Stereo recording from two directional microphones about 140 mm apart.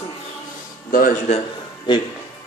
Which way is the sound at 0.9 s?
85° left.